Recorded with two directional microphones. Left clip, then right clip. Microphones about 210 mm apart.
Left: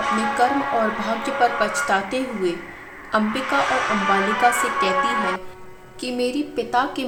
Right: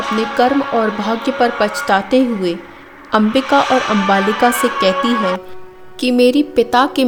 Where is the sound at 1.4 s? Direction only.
40° right (ahead or behind).